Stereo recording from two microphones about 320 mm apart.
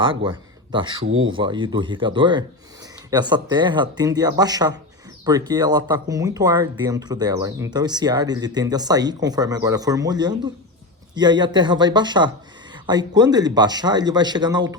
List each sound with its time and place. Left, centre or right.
0.0 s speech: centre
1.0 s speech: right
1.3 s speech: centre